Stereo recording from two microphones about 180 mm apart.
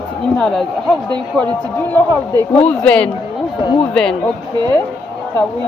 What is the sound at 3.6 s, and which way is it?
Speech, 25° left (ahead or behind).